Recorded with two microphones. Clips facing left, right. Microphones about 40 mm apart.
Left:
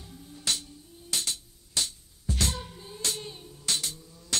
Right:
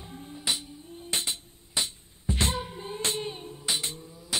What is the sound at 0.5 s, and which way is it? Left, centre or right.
Music, centre.